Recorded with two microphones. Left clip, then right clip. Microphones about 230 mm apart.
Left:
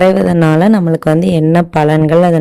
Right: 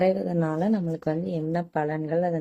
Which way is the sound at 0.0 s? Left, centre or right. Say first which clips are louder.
Left 14 dB; left.